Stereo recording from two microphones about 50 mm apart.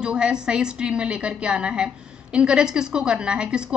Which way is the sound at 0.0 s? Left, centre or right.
Centre.